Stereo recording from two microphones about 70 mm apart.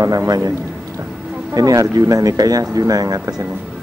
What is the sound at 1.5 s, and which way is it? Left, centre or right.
Speech, right.